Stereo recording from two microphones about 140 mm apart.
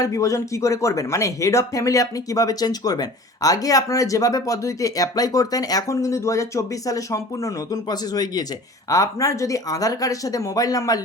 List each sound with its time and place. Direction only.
0.0 s speech: 25° left (ahead or behind)